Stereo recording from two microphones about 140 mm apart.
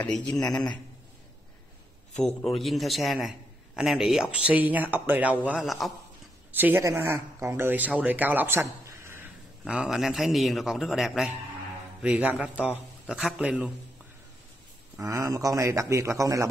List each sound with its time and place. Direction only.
0.0 s a man's voice: 10° left (ahead or behind)
2.1 s a man's voice: centre (ahead or behind)
6.5 s speech: 15° right (ahead or behind)
9.7 s a man's voice: 5° right (ahead or behind)
15.0 s speech: 25° right (ahead or behind)